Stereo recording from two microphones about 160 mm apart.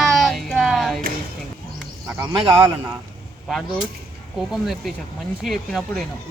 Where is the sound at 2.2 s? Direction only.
25° right (ahead or behind).